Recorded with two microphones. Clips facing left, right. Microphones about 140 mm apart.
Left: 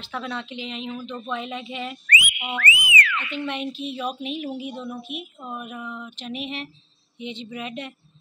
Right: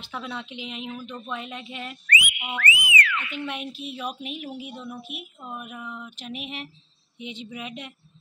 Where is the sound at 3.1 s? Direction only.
10° right (ahead or behind).